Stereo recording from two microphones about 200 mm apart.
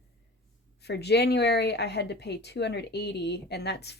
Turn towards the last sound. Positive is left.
turn(degrees=55)  # may be behind; listen again after turning